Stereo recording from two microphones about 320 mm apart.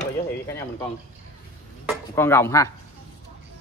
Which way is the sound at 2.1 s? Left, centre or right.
Centre.